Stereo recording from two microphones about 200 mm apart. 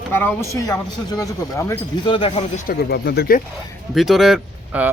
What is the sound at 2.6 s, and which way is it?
Speech, 50° left (ahead or behind).